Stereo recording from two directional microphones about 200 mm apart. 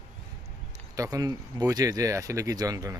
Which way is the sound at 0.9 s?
15° right (ahead or behind).